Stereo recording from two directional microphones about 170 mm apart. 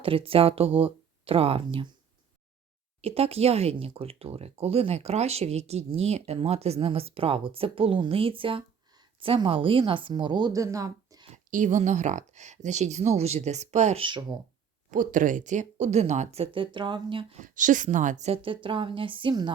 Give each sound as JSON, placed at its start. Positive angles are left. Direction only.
{"t": 0.0, "sound": "speech", "side_deg": -35}
{"t": 3.0, "sound": "speech", "side_deg": -35}
{"t": 11.5, "sound": "speech", "side_deg": -45}
{"t": 14.8, "sound": "speech", "side_deg": -50}
{"t": 17.4, "sound": "speech", "side_deg": -50}